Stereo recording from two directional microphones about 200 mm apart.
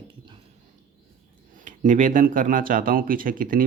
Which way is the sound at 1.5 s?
40° right (ahead or behind).